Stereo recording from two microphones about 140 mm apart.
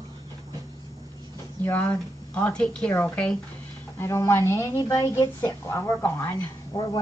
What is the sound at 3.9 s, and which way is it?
A woman's voice, 20° left (ahead or behind).